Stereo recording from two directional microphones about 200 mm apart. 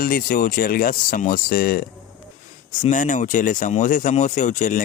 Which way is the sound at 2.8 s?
40° left (ahead or behind).